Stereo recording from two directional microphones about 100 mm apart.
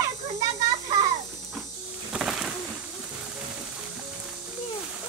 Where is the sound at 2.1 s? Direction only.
5° right (ahead or behind).